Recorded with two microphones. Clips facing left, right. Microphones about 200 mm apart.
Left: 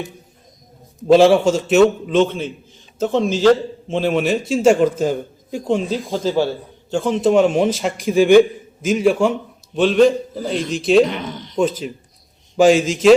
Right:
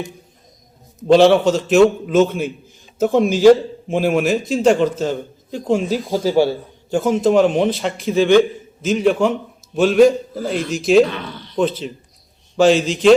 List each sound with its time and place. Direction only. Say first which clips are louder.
0.9 s a man's voice: even; centre (ahead or behind)
5.6 s a man's voice: right 2 dB; 5° right (ahead or behind)
9.7 s a man's voice: right 1 dB; 5° right (ahead or behind)
11.0 s a man's voice: even; 20° left (ahead or behind)
12.5 s a man's voice: left 1 dB; 10° left (ahead or behind)